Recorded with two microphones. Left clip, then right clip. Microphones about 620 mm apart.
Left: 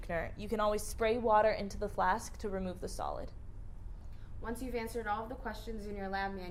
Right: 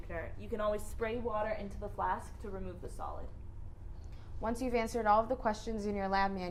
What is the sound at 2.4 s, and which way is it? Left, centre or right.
Speech, left.